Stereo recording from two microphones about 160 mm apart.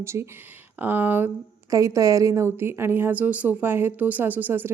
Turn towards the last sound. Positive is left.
turn(degrees=-10)  # may be behind; listen again after turning